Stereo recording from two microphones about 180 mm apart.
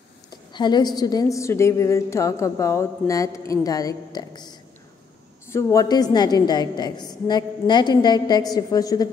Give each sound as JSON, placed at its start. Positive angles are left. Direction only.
{"t": 0.5, "sound": "a woman's voice", "side_deg": 25}